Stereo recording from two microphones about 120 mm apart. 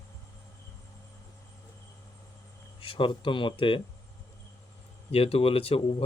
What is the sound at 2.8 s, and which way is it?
Speech, 45° left (ahead or behind).